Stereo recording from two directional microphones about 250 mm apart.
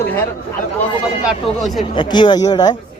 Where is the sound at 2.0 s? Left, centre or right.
Centre.